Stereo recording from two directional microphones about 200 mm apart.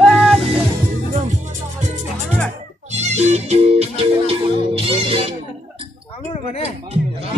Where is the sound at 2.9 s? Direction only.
35° right (ahead or behind).